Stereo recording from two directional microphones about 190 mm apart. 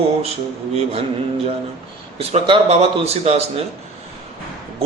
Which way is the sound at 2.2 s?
30° right (ahead or behind).